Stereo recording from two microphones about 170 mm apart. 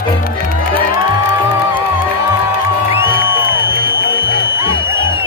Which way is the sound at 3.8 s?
65° right (ahead or behind).